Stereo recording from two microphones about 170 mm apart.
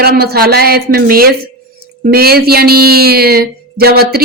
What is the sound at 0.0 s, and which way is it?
A woman's voice, 65° right (ahead or behind).